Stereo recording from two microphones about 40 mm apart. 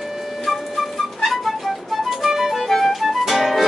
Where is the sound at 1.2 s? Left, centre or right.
Centre.